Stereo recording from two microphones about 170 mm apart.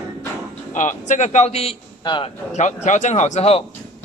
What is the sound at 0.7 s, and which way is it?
A man's voice, 50° left (ahead or behind).